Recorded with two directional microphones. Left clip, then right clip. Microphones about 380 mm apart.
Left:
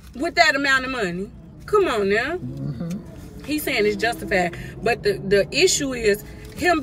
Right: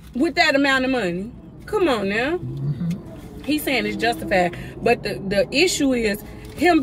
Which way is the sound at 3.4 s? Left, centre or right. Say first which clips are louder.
Left 1 dB; centre.